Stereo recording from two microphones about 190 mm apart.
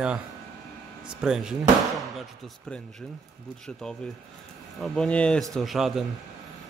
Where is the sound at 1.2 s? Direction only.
5° right (ahead or behind).